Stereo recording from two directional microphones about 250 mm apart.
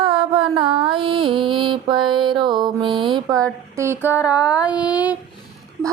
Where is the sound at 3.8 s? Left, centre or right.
Centre.